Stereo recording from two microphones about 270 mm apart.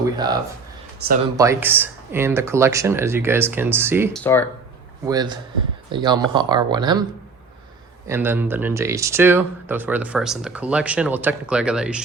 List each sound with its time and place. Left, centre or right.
1.0 s speech: right
1.4 s speech: centre
4.1 s speech: centre
5.0 s speech: centre
8.0 s speech: centre